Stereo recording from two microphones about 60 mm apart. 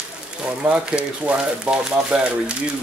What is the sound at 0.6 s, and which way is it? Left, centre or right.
Speech, centre.